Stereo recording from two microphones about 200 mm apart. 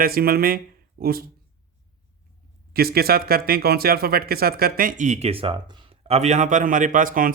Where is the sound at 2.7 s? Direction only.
50° right (ahead or behind).